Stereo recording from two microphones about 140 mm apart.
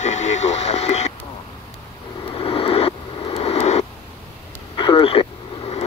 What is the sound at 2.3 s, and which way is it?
Vehicle, 40° left (ahead or behind).